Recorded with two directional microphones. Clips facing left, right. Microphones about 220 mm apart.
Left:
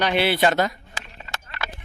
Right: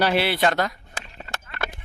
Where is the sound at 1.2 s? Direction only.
50° right (ahead or behind).